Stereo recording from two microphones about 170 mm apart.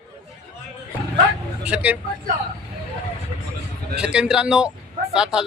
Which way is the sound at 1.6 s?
5° right (ahead or behind).